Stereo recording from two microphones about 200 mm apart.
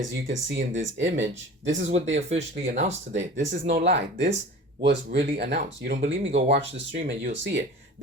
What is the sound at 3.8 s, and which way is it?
Speech, 60° right (ahead or behind).